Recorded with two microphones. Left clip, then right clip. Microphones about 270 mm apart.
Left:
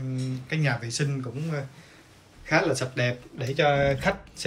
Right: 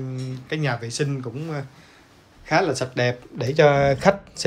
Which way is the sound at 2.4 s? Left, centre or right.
Centre.